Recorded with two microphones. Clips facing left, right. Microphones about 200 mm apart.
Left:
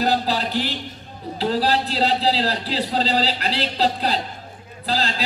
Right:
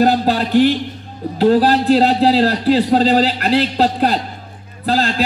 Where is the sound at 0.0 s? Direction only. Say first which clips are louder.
Right 7 dB; 55° right (ahead or behind).